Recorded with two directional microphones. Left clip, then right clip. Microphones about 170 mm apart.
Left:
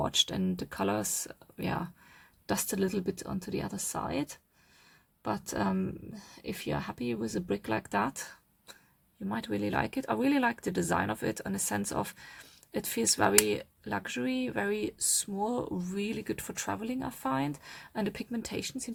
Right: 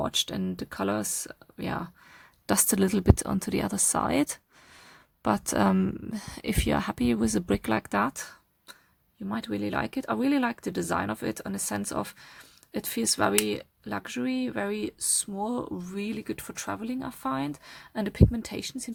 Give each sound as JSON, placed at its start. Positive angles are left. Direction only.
{"t": 0.0, "sound": "speech", "side_deg": -20}
{"t": 2.5, "sound": "speech", "side_deg": -40}